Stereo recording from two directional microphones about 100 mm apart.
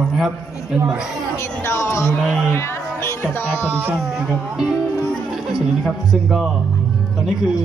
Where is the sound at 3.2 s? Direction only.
20° left (ahead or behind).